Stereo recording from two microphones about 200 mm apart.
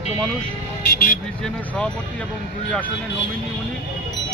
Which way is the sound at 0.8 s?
45° left (ahead or behind).